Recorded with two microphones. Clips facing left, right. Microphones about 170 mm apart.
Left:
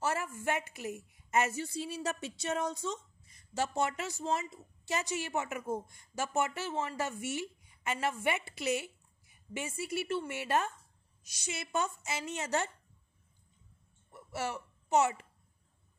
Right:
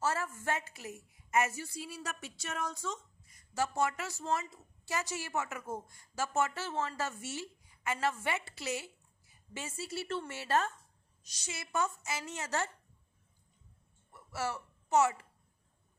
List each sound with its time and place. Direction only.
0.0 s a woman's voice: 15° left (ahead or behind)
14.1 s a child's voice: 20° left (ahead or behind)